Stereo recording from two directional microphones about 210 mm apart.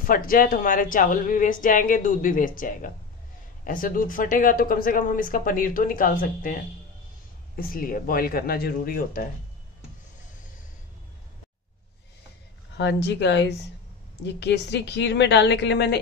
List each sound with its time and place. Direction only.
0.0 s speech: 40° left (ahead or behind)
12.7 s a woman's voice: 55° left (ahead or behind)